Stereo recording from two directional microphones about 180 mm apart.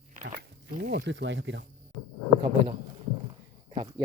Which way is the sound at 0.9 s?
70° right (ahead or behind).